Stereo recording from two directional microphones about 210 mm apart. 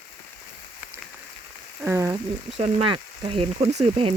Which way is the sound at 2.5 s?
25° right (ahead or behind).